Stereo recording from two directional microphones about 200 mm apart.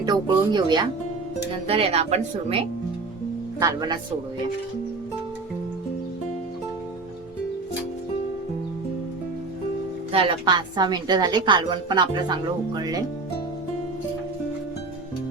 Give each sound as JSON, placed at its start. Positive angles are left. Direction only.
{"t": 0.0, "sound": "a woman's voice", "side_deg": -20}
{"t": 3.6, "sound": "a woman's voice", "side_deg": -20}
{"t": 10.1, "sound": "a woman's voice", "side_deg": -25}